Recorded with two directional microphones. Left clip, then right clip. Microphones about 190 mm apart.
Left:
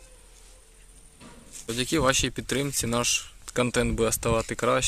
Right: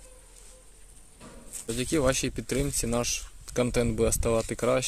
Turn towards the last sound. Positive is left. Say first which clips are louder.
# left 1 dB
turn(degrees=-5)  # may be behind; listen again after turning